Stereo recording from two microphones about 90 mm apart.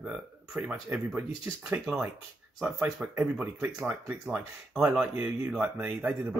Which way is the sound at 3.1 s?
20° right (ahead or behind).